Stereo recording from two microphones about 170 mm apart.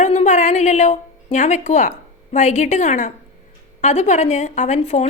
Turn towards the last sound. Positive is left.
turn(degrees=40)  # may be behind; listen again after turning